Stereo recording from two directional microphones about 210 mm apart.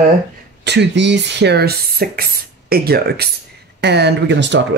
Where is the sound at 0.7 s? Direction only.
55° right (ahead or behind).